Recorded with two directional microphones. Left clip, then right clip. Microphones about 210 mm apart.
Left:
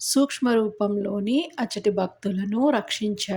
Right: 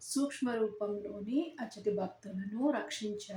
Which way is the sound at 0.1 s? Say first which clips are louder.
Left 13 dB; 40° left (ahead or behind).